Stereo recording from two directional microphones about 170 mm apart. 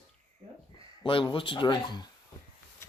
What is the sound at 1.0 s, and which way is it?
Speech, 30° left (ahead or behind).